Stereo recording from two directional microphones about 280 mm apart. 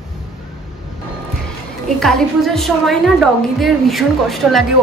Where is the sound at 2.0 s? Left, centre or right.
Centre.